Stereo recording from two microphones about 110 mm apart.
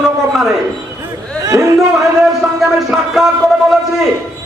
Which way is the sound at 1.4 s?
30° right (ahead or behind).